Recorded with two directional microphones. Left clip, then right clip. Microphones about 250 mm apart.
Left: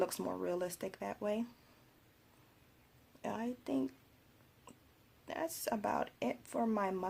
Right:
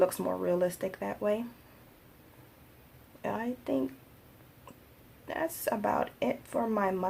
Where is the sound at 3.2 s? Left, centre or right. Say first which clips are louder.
Right 7 dB; left.